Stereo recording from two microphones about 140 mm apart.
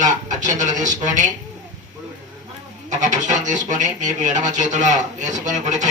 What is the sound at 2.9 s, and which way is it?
Speech, 60° right (ahead or behind).